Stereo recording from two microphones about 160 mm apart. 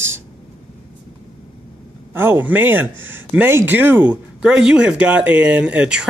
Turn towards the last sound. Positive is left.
turn(degrees=-5)  # may be behind; listen again after turning